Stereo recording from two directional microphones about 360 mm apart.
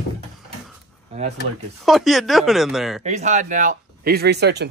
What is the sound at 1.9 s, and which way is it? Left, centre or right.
Speech, centre.